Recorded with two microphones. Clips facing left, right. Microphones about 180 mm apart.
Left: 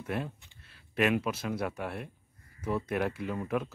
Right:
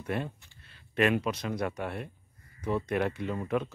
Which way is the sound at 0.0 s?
Centre (ahead or behind).